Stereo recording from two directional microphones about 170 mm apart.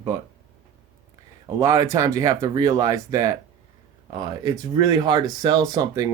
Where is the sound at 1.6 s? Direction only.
20° right (ahead or behind).